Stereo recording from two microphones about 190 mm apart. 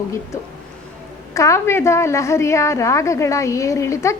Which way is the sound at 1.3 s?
15° left (ahead or behind).